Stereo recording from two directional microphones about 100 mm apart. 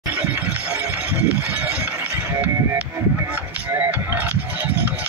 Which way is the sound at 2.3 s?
25° right (ahead or behind).